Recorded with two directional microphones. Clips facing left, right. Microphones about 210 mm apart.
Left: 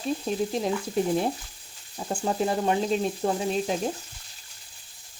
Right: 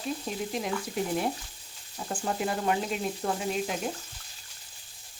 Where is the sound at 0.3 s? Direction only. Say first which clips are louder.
Left 8 dB; 30° left (ahead or behind).